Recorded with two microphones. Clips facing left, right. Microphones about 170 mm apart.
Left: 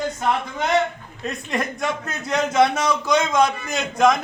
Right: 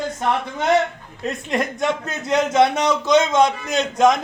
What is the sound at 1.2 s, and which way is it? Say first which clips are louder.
A man's voice: right 3 dB; 25° right (ahead or behind).